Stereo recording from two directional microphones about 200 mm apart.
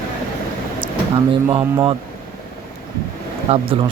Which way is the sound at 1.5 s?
20° right (ahead or behind).